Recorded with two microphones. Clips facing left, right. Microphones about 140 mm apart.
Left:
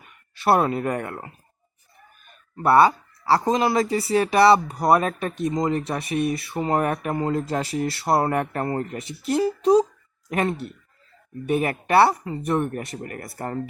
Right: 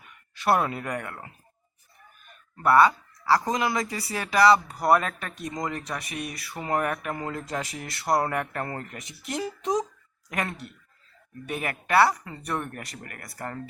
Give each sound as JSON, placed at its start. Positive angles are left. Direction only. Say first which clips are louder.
{"t": 0.3, "sound": "speech", "louder": "left 4 dB", "side_deg": 30}
{"t": 2.6, "sound": "speech", "louder": "left 3 dB", "side_deg": 25}